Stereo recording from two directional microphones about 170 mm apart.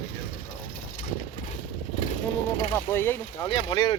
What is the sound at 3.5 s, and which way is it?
Speech, 30° left (ahead or behind).